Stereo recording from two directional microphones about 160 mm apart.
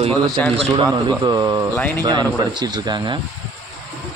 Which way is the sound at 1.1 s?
25° right (ahead or behind).